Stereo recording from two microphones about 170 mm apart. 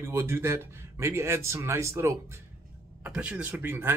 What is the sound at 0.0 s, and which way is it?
Speech, 15° right (ahead or behind).